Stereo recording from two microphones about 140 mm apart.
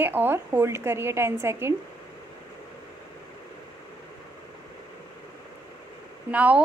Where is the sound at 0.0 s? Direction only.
15° right (ahead or behind).